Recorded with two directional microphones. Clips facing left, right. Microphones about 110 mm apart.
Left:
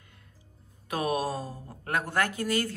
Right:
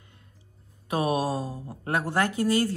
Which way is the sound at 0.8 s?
20° right (ahead or behind).